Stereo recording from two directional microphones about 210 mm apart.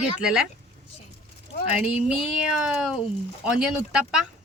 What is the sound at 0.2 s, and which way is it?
Speech, 5° right (ahead or behind).